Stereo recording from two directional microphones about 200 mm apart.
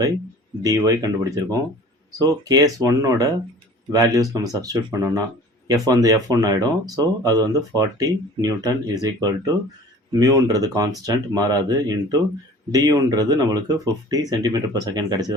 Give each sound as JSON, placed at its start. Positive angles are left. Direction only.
{"t": 0.6, "sound": "speech", "side_deg": -20}